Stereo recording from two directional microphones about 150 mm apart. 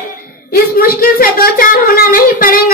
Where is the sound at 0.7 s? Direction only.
80° left.